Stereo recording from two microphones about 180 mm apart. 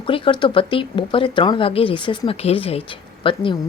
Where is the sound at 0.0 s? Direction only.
30° left (ahead or behind).